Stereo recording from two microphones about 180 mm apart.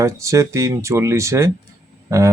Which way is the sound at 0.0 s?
15° right (ahead or behind).